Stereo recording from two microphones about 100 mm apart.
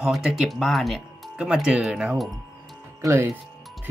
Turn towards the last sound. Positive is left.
turn(degrees=-30)  # may be behind; listen again after turning